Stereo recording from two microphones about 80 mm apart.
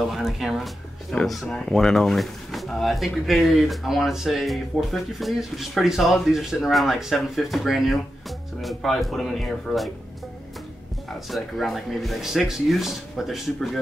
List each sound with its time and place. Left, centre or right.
0.0 s speech: centre
11.2 s speech: centre